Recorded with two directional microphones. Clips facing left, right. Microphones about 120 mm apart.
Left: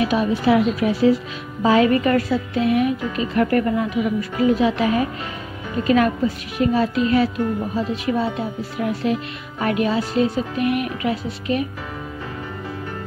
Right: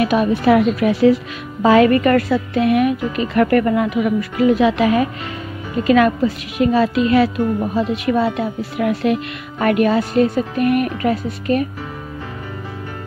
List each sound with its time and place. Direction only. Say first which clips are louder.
0.0 s a woman's voice: right 3 dB; 60° right (ahead or behind); by 7.2 s 85° right
7.7 s speech: right 4 dB; 70° right (ahead or behind); by 11.6 s 50° right (ahead or behind)